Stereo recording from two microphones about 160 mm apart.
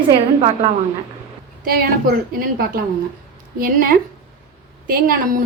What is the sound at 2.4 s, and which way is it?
A woman's voice, 65° right (ahead or behind).